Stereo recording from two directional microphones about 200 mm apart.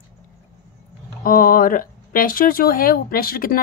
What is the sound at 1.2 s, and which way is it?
Speech, 45° left (ahead or behind).